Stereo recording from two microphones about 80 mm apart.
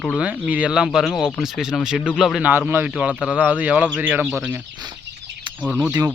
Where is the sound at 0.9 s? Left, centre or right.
Centre.